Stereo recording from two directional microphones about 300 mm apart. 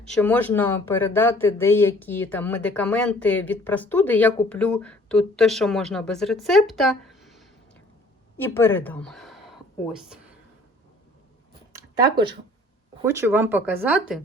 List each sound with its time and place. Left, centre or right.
0.1 s speech: centre
11.7 s a sound: centre
13.1 s speech: centre